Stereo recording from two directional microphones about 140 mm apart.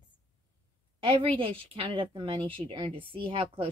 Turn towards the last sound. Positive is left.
turn(degrees=-40)  # may be behind; listen again after turning